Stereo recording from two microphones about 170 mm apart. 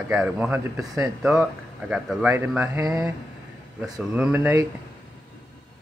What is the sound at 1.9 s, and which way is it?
Speech, 5° right (ahead or behind).